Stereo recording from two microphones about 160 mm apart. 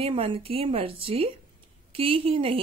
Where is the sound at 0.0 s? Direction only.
35° right (ahead or behind).